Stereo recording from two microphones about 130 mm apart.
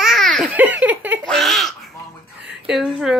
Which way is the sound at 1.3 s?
Centre (ahead or behind).